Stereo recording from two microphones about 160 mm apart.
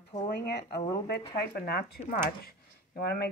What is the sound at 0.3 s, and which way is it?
Speech, 90° left.